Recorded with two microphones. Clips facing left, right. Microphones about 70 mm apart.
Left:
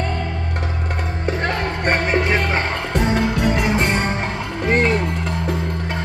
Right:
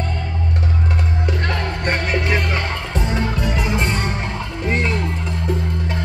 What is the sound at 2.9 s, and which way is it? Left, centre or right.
Music, left.